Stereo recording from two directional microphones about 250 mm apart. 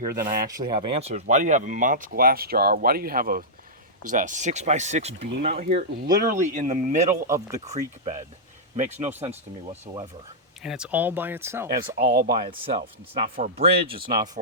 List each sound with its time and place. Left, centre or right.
0.2 s speech: right
0.6 s speech: right
7.3 s speech: centre
7.6 s speech: right
10.6 s speech: centre
11.9 s speech: right
12.4 s speech: right